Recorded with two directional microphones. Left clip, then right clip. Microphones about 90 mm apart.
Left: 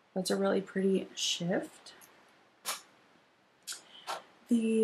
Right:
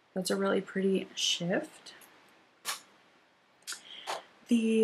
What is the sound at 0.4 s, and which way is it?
Speech, centre (ahead or behind).